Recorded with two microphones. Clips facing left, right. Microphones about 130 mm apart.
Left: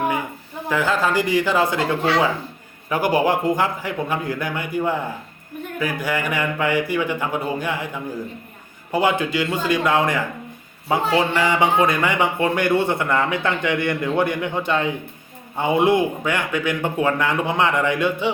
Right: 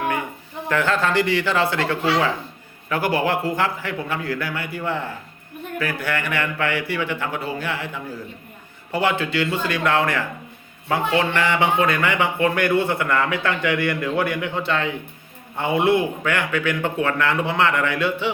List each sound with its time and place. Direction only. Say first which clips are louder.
0.7 s speech: even; 10° left (ahead or behind)
8.9 s speech: left 2 dB; 15° left (ahead or behind)
11.3 s speech: left 2 dB; 15° left (ahead or behind)